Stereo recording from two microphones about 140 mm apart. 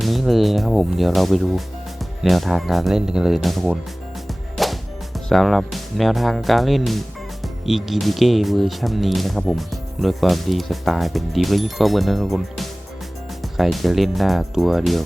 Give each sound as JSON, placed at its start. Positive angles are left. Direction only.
{"t": 0.0, "sound": "speech", "side_deg": 0}
{"t": 4.3, "sound": "music", "side_deg": 0}
{"t": 7.4, "sound": "speech", "side_deg": 0}